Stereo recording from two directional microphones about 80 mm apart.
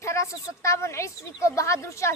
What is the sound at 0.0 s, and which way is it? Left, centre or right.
A woman's voice, left.